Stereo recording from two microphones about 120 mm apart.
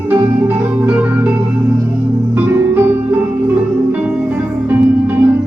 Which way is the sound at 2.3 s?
15° right (ahead or behind).